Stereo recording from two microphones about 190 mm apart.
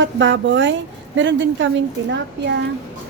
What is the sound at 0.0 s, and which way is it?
A woman's voice, 70° right (ahead or behind).